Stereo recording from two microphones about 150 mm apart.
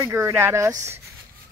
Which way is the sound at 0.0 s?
15° right (ahead or behind).